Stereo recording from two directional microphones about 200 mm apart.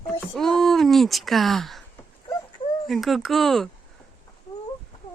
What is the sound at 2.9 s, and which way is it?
Speech, centre (ahead or behind).